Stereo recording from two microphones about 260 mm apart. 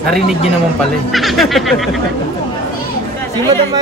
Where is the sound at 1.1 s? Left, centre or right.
Centre.